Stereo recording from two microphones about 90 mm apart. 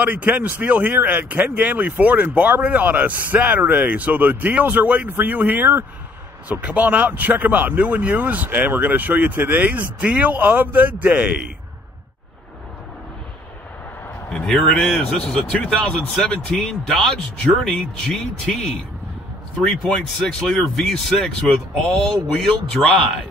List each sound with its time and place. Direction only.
0.0 s speech: 15° right (ahead or behind)
14.3 s a man's voice: 5° left (ahead or behind)